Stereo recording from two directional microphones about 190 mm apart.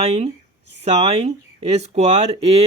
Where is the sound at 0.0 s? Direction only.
35° right (ahead or behind).